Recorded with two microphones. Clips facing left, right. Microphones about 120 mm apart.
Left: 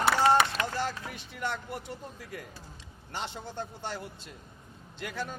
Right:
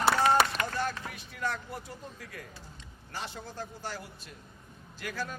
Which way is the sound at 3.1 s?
25° left (ahead or behind).